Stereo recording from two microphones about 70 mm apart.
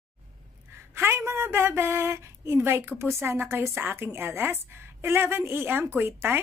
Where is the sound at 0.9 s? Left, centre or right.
Right.